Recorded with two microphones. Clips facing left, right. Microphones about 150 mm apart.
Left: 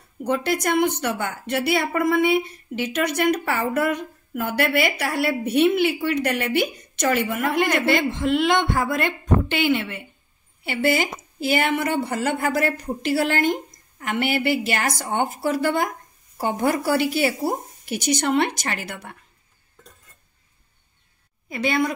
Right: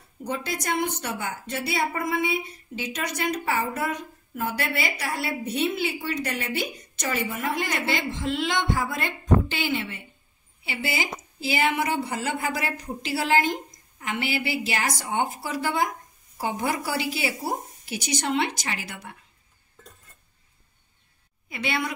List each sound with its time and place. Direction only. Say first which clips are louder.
0.2 s speech: left 8 dB; 65° left (ahead or behind)
21.5 s a woman's voice: left 7 dB; 40° left (ahead or behind)